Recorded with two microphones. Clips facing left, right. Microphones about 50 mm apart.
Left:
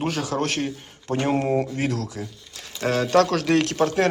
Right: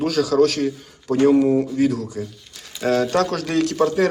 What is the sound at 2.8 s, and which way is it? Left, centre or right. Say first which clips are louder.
Speech: even; left.